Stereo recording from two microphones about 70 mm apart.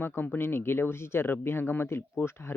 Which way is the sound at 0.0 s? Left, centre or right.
Left.